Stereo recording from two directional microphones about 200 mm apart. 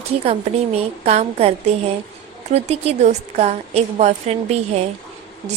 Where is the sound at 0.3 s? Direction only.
30° right (ahead or behind).